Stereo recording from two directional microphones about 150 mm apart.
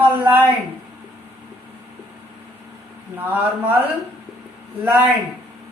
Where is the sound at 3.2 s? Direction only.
10° right (ahead or behind).